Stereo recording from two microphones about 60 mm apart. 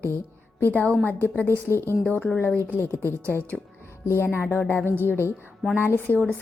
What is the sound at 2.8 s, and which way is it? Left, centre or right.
Speech, left.